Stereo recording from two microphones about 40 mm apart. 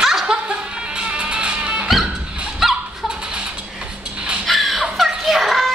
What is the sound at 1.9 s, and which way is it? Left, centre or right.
Music, centre.